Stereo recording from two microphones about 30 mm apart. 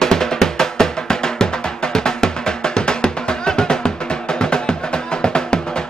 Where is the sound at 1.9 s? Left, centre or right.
Left.